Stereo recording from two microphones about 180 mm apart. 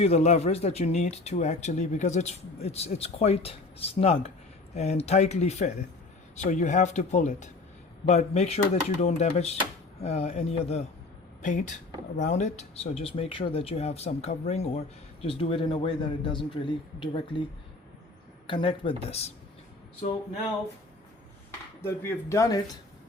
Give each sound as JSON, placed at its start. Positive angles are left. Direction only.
{"t": 0.0, "sound": "speech", "side_deg": 35}
{"t": 18.4, "sound": "speech", "side_deg": 30}
{"t": 21.8, "sound": "speech", "side_deg": 15}